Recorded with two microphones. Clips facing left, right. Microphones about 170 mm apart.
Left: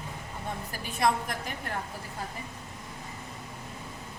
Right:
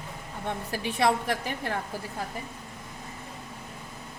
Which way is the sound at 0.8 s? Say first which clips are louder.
Right 2 dB; 75° right (ahead or behind).